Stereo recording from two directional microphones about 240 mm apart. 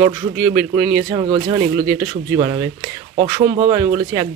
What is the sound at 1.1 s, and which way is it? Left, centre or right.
Speech, centre.